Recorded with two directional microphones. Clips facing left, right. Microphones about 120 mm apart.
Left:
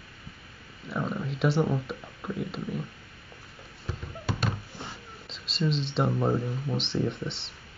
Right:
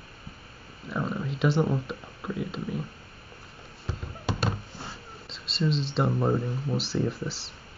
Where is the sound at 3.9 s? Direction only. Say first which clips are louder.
Right 1 dB; 30° right (ahead or behind).